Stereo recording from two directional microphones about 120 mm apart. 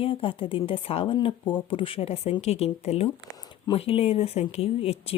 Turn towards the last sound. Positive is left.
turn(degrees=55)  # may be behind; listen again after turning